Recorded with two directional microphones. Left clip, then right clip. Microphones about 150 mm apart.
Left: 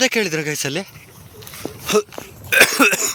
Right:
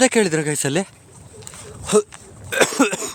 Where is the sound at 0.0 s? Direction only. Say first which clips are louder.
Right 1 dB; 40° right (ahead or behind).